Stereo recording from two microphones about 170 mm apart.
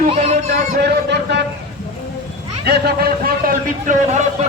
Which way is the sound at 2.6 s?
70° right (ahead or behind).